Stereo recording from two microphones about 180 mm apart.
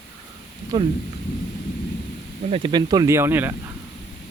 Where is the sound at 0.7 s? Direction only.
20° right (ahead or behind).